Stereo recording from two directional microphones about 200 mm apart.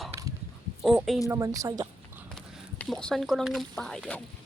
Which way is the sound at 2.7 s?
5° left (ahead or behind).